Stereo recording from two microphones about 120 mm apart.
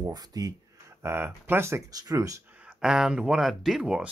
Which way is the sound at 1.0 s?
20° right (ahead or behind).